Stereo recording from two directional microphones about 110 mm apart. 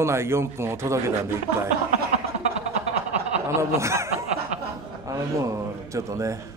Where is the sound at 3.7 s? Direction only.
25° right (ahead or behind).